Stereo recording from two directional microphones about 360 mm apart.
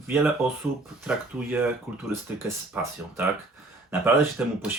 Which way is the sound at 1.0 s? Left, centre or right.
Centre.